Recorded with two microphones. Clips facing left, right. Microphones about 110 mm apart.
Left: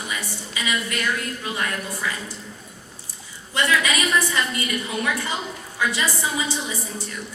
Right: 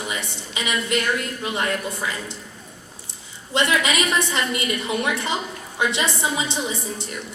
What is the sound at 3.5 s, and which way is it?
A woman's voice, 20° right (ahead or behind).